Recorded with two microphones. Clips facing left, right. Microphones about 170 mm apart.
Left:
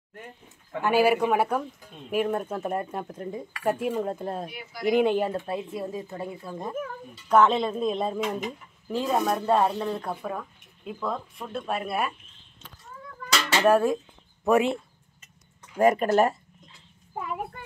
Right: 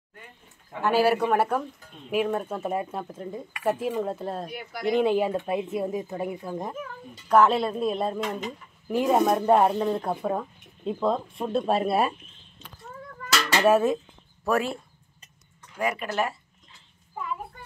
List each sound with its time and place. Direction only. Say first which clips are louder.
0.8 s speech: even; 10° left (ahead or behind)
4.5 s speech: right 4 dB; 50° right (ahead or behind)
4.8 s speech: even; centre (ahead or behind)
5.5 s speech: right 4 dB; 20° right (ahead or behind)
7.2 s speech: right 1 dB; 5° right (ahead or behind)
8.8 s speech: right 4 dB; 15° right (ahead or behind); by 12.2 s 30° right (ahead or behind)
13.6 s speech: even; 5° right (ahead or behind)
14.4 s speech: left 4 dB; 20° left (ahead or behind)
15.8 s speech: left 7 dB; 45° left (ahead or behind)